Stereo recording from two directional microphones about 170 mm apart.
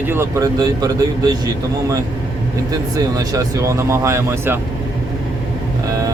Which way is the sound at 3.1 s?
20° right (ahead or behind).